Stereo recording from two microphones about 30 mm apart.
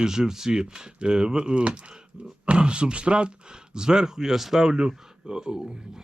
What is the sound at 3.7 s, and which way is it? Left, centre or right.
A man's voice, right.